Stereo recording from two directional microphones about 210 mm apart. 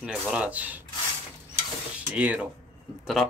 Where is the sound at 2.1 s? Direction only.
5° right (ahead or behind).